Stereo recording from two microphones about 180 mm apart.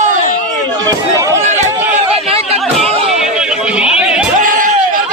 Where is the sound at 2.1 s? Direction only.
35° right (ahead or behind).